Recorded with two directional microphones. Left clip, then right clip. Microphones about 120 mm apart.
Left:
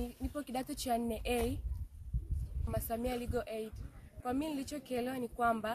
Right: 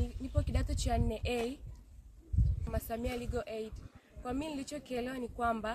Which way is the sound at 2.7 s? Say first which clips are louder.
Left 1 dB; 15° right (ahead or behind).